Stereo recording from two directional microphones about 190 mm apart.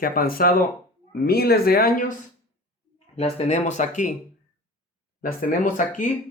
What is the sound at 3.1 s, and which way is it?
Speech, 35° left (ahead or behind).